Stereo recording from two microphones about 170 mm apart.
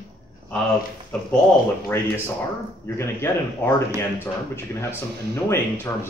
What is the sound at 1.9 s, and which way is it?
A man's voice, 15° left (ahead or behind).